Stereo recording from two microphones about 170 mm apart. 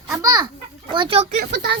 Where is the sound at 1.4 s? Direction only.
75° right (ahead or behind).